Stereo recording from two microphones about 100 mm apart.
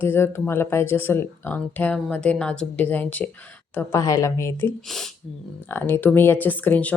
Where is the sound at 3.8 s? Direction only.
35° left (ahead or behind).